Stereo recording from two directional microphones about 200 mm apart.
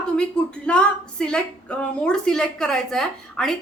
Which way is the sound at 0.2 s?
5° left (ahead or behind).